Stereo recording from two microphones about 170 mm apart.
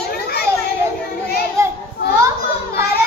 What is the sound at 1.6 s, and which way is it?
Child singing, 20° right (ahead or behind).